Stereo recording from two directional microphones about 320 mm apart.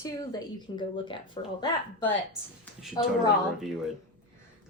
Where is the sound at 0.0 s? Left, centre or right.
Centre.